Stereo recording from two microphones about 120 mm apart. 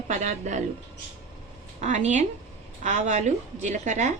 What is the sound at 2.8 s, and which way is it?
A woman's voice, 90° right.